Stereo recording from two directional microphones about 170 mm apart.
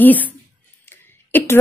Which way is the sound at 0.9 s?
15° left (ahead or behind).